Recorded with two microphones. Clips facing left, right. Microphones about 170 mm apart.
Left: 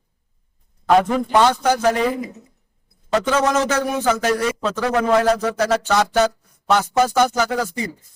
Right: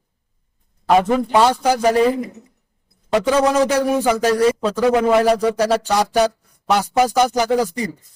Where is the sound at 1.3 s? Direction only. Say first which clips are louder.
Even; 10° right (ahead or behind).